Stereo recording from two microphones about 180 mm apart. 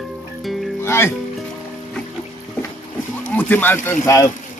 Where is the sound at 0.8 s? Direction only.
15° left (ahead or behind).